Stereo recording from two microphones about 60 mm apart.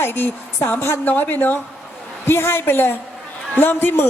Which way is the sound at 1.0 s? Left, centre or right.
Left.